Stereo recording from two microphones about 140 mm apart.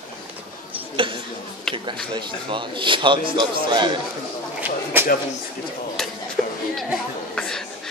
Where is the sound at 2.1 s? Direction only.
35° right (ahead or behind).